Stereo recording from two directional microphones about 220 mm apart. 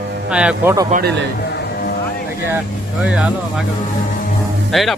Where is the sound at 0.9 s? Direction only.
40° right (ahead or behind).